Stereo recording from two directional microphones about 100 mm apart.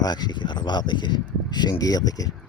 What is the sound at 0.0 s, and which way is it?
A man's voice, 45° left (ahead or behind).